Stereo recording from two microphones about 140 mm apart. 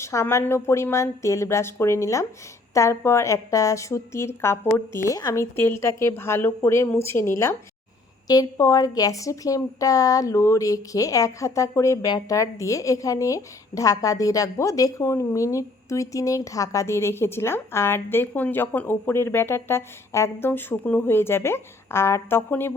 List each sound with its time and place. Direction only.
0.0 s speech: 20° left (ahead or behind)